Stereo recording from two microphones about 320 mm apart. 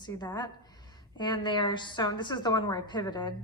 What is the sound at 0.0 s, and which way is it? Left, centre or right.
A woman's voice, centre.